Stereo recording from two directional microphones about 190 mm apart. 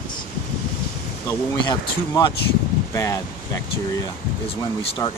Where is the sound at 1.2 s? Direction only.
15° left (ahead or behind).